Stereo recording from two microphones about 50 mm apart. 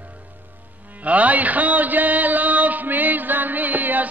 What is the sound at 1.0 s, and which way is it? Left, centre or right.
Music, right.